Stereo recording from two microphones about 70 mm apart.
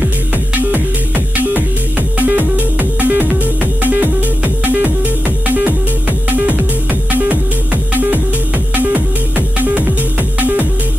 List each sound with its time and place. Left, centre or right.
0.6 s music: right